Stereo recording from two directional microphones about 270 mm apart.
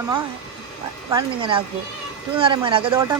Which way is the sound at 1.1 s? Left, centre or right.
Centre.